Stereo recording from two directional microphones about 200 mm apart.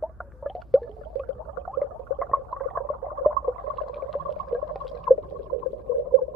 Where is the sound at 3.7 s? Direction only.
Centre (ahead or behind).